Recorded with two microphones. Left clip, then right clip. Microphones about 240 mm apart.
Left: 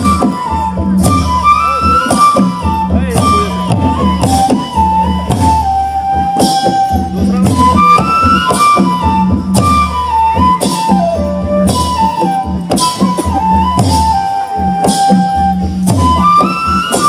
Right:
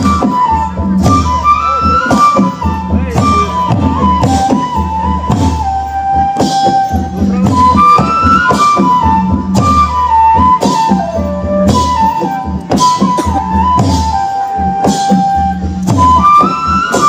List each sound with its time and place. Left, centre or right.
1.0 s music: left
7.3 s music: left